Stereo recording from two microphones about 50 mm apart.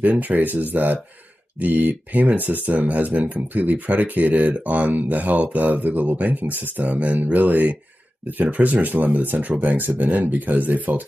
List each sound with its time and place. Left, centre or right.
0.2 s speech: right
6.8 s speech: right